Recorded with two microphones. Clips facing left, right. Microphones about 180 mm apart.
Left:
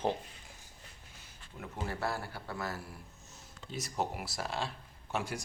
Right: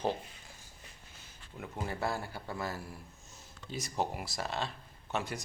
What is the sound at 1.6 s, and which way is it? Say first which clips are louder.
Speech: right 1 dB; 5° left (ahead or behind).